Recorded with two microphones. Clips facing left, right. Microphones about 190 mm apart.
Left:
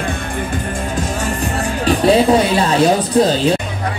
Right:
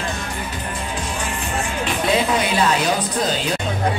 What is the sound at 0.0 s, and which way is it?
Music, 55° left (ahead or behind).